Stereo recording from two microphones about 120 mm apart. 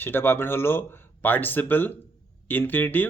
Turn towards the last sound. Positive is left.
turn(degrees=15)  # may be behind; listen again after turning